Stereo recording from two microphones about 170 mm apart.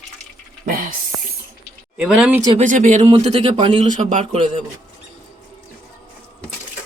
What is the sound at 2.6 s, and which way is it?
Speech, 45° right (ahead or behind).